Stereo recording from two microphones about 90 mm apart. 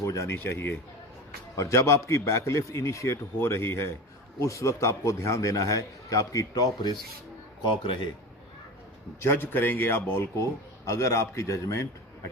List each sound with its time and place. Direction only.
0.0 s a man's voice: 35° left (ahead or behind)
7.7 s a man's voice: 70° left (ahead or behind)
9.2 s a man's voice: 25° left (ahead or behind)